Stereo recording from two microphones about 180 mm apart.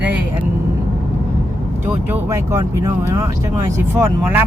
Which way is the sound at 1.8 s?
15° right (ahead or behind).